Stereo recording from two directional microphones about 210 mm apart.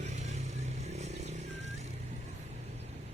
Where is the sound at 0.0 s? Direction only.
35° right (ahead or behind).